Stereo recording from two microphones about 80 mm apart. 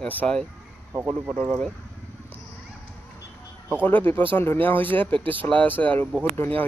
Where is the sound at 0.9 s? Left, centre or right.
Right.